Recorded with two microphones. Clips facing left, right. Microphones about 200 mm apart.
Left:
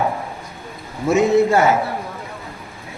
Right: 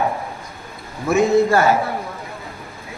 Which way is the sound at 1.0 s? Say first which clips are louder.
Left 1 dB; 20° left (ahead or behind).